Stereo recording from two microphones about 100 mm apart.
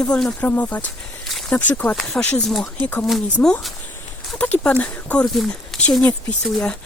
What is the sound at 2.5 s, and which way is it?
Speech, centre (ahead or behind).